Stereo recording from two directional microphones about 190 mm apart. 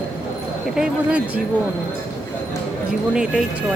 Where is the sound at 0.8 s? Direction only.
5° right (ahead or behind).